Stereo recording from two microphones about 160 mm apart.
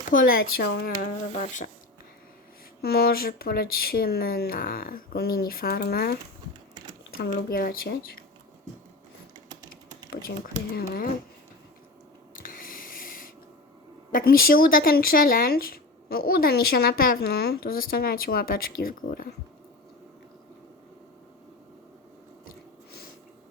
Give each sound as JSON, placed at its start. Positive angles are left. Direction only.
{"t": 0.1, "sound": "speech", "side_deg": 60}
{"t": 1.4, "sound": "speech", "side_deg": 50}
{"t": 2.8, "sound": "speech", "side_deg": 75}
{"t": 7.2, "sound": "speech", "side_deg": 65}
{"t": 10.8, "sound": "speech", "side_deg": 65}
{"t": 12.4, "sound": "a sound", "side_deg": 60}
{"t": 14.1, "sound": "speech", "side_deg": 65}
{"t": 22.4, "sound": "a sound", "side_deg": 80}